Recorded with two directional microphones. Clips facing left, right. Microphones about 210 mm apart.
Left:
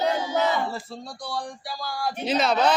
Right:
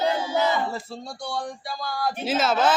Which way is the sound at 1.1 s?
25° right (ahead or behind).